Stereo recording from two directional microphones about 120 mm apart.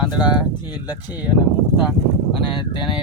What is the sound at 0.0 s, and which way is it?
Speech, 35° left (ahead or behind).